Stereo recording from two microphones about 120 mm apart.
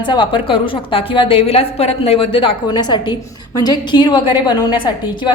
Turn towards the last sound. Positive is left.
turn(degrees=40)  # may be behind; listen again after turning